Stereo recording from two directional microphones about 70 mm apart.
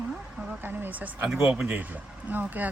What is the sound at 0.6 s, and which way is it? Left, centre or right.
Speech, right.